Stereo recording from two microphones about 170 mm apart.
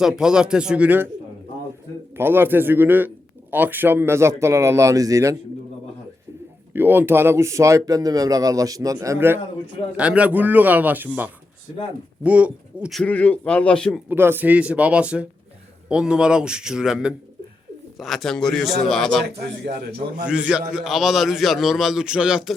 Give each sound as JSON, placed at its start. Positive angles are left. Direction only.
{"t": 0.0, "sound": "a man's voice", "side_deg": -5}
{"t": 2.1, "sound": "speech", "side_deg": -10}
{"t": 6.7, "sound": "a man's voice", "side_deg": -10}
{"t": 14.1, "sound": "a man's voice", "side_deg": -10}
{"t": 19.2, "sound": "a man's voice", "side_deg": -75}
{"t": 20.2, "sound": "a man's voice", "side_deg": -5}